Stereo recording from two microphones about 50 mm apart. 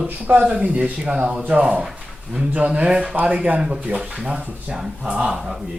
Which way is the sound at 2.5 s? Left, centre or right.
Right.